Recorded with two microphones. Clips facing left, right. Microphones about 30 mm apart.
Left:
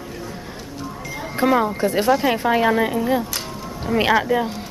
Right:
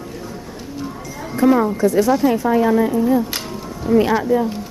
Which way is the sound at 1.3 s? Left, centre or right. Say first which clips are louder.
Right 3 dB; left.